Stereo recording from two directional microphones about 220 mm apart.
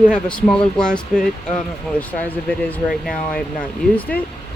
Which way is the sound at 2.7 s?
5° left (ahead or behind).